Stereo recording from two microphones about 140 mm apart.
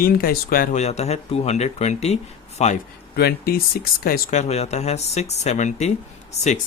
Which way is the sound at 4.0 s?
90° left.